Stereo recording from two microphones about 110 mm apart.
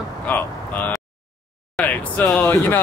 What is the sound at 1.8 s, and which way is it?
Speech, 15° left (ahead or behind).